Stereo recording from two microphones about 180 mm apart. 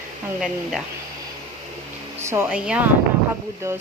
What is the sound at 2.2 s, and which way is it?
A woman's voice, 15° right (ahead or behind).